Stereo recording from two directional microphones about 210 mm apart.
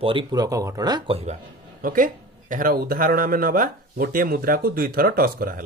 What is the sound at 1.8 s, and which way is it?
Speech, 40° right (ahead or behind).